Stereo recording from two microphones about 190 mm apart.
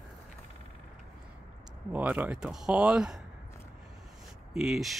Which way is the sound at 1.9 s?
10° right (ahead or behind).